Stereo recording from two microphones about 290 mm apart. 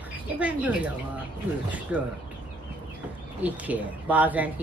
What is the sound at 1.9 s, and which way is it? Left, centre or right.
Speech, centre.